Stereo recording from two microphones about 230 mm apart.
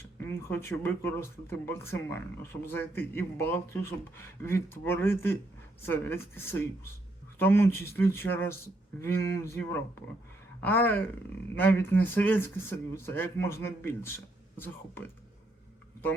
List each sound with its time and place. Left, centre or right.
0.2 s speech: centre